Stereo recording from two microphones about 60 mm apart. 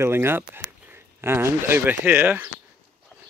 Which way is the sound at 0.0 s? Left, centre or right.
Right.